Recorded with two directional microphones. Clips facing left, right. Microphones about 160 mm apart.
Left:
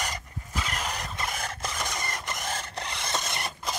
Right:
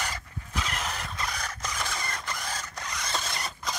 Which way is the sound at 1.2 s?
25° left (ahead or behind).